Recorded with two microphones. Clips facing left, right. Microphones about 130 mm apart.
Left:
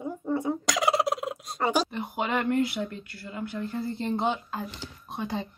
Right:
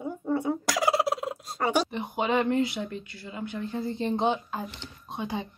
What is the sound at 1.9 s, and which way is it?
Speech, 20° right (ahead or behind).